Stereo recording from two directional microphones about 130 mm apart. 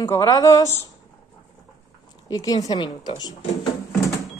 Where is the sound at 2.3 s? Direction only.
30° left (ahead or behind).